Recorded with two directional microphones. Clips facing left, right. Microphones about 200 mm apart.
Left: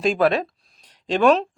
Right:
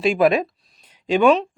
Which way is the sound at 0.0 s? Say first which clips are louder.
Right 2 dB; 10° right (ahead or behind).